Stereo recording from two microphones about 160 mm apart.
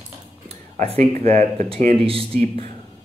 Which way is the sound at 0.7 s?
40° right (ahead or behind).